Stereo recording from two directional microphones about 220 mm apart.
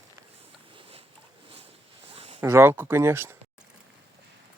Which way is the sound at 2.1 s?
25° right (ahead or behind).